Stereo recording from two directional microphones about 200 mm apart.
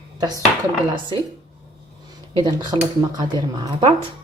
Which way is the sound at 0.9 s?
20° right (ahead or behind).